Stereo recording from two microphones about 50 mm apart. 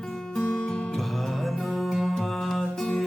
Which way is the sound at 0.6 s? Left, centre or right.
Centre.